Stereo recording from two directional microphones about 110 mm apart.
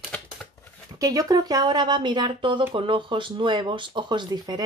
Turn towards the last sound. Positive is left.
turn(degrees=-40)  # may be behind; listen again after turning